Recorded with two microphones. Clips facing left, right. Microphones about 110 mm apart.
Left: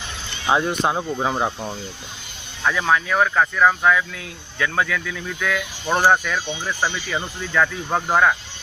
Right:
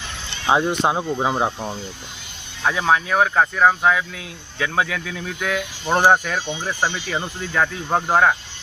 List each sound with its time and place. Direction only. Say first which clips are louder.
0.5 s speech: right 1 dB; 20° right (ahead or behind)
2.6 s speech: right 1 dB; 25° right (ahead or behind)
5.0 s speech: even; 35° right (ahead or behind)